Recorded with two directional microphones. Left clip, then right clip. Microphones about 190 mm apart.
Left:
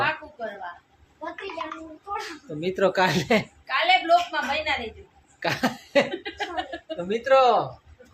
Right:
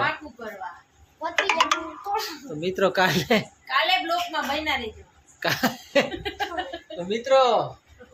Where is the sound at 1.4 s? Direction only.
55° right (ahead or behind).